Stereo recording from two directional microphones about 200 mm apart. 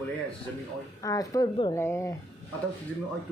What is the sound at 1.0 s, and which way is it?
A woman's voice, 15° left (ahead or behind).